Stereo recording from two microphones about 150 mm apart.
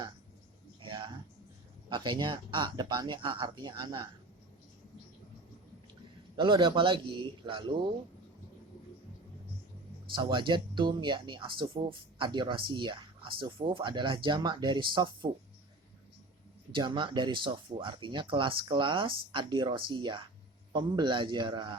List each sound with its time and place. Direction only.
0.8 s music: 30° right (ahead or behind)
1.9 s speech: 30° right (ahead or behind)
6.3 s speech: 35° right (ahead or behind)
10.2 s speech: 30° right (ahead or behind)
16.7 s speech: 30° right (ahead or behind)